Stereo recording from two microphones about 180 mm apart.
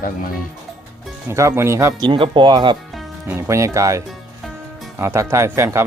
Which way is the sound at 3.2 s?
15° right (ahead or behind).